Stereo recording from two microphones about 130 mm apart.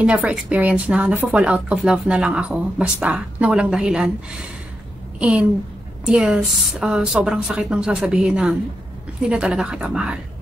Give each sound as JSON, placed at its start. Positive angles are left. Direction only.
{"t": 0.0, "sound": "speech", "side_deg": -10}